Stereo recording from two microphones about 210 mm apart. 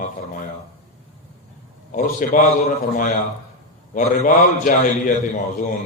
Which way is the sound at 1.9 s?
40° left (ahead or behind).